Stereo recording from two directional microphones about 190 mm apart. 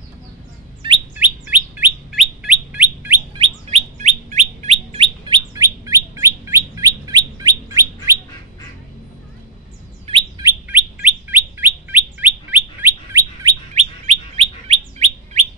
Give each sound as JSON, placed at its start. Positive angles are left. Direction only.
{"t": 1.1, "sound": "bird", "side_deg": -10}
{"t": 3.3, "sound": "chirp", "side_deg": -35}
{"t": 6.1, "sound": "bird", "side_deg": -15}
{"t": 10.0, "sound": "bird", "side_deg": -25}
{"t": 10.4, "sound": "bird", "side_deg": -10}
{"t": 13.7, "sound": "bird", "side_deg": -35}